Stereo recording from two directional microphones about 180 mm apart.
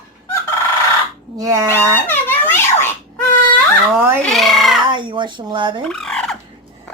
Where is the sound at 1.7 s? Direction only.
10° left (ahead or behind).